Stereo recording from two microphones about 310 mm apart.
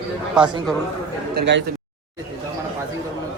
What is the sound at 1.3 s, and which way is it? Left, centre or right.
Speech, right.